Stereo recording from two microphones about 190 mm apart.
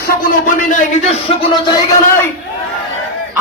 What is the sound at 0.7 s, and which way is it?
Speech, 35° left (ahead or behind).